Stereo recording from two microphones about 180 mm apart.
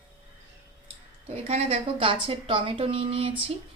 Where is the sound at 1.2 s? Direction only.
35° right (ahead or behind).